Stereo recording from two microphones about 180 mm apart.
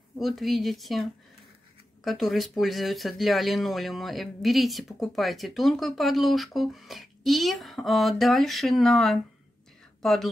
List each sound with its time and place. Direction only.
0.2 s speech: centre (ahead or behind)
2.0 s speech: centre (ahead or behind)